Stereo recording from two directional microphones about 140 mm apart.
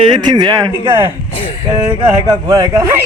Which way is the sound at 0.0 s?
30° right (ahead or behind).